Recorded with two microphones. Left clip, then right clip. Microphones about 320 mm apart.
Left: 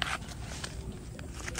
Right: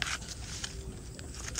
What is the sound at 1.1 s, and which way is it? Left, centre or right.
Boat, left.